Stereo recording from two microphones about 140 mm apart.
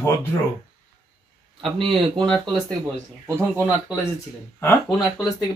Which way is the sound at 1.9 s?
35° right (ahead or behind).